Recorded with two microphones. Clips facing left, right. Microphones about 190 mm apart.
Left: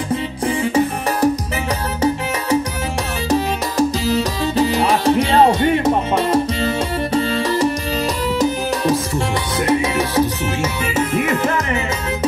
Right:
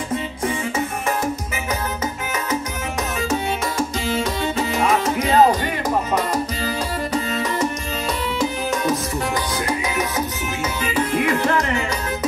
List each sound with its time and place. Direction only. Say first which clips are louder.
0.5 s music: left 8 dB; 35° left (ahead or behind)
3.3 s music: left 6 dB; 35° left (ahead or behind)
9.7 s music: left 6 dB; 30° left (ahead or behind)